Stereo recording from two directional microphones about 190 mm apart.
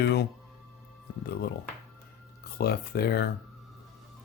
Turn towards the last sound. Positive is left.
turn(degrees=55)  # may be behind; listen again after turning